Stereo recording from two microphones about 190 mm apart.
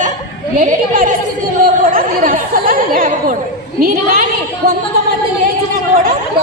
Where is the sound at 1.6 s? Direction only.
50° right (ahead or behind).